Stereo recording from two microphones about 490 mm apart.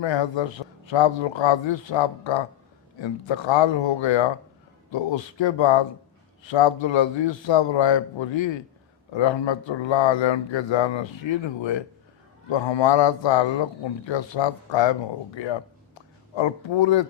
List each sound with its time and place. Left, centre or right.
0.0 s speech: left